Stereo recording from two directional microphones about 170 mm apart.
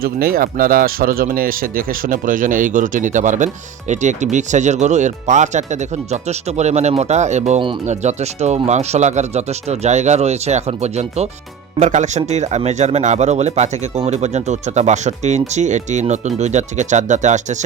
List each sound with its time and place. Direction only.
0.0 s speech: 60° right (ahead or behind)